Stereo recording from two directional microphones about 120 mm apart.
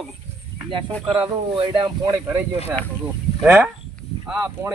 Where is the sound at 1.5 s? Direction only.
40° right (ahead or behind).